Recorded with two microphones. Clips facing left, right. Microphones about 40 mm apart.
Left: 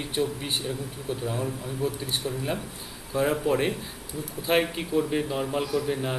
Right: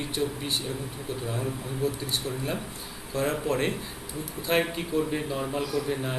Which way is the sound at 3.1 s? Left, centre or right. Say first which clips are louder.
Left 3 dB; centre.